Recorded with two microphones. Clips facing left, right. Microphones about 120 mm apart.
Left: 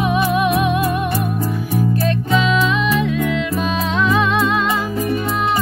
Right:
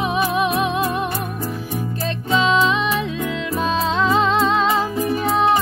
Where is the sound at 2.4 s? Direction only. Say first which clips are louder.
Right 4 dB; 30° right (ahead or behind).